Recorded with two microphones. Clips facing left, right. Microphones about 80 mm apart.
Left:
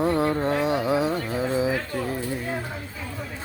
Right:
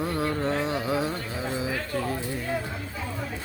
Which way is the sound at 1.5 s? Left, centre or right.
Left.